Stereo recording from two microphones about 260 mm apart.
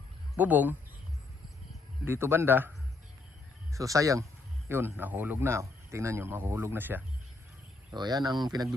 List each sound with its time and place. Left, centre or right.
0.3 s speech: centre
2.0 s speech: centre